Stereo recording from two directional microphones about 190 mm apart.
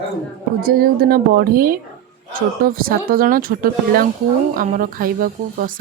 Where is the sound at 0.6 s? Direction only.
50° right (ahead or behind).